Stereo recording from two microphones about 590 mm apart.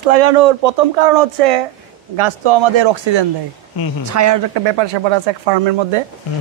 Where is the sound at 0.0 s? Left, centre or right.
Right.